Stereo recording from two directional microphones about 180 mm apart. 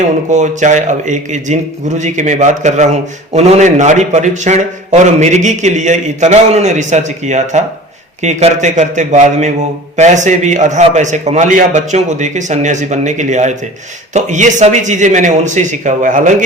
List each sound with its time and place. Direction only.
0.3 s a man's voice: 40° right (ahead or behind)